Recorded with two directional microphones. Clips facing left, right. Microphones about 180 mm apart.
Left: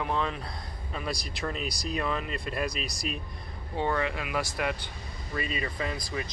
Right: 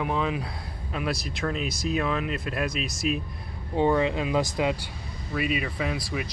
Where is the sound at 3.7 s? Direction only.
15° right (ahead or behind).